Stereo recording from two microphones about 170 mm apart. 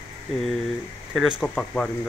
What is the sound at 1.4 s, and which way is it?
Speech, 5° left (ahead or behind).